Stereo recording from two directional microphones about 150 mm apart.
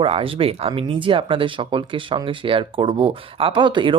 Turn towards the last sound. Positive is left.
turn(degrees=-35)  # may be behind; listen again after turning